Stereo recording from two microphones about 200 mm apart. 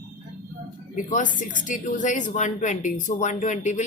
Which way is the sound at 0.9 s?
40° left (ahead or behind).